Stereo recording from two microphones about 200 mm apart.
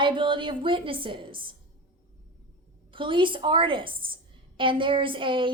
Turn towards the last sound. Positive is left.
turn(degrees=-25)  # may be behind; listen again after turning